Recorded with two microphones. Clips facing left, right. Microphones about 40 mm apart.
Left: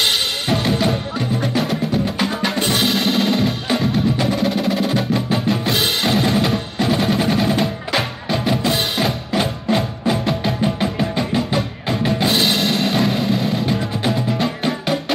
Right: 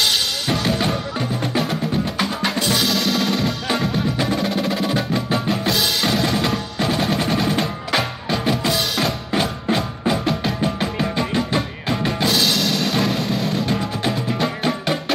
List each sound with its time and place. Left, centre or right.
0.7 s music: centre
2.6 s music: left
3.6 s percussion: centre
5.7 s percussion: left
6.0 s drum: centre
6.8 s percussion: centre
9.4 s music: centre
12.3 s music: left
12.9 s music: centre